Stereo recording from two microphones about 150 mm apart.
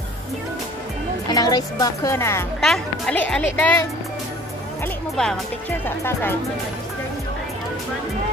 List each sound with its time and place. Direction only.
1.3 s speech: 25° left (ahead or behind)
2.6 s speech: 5° left (ahead or behind)
5.9 s speech: 15° left (ahead or behind)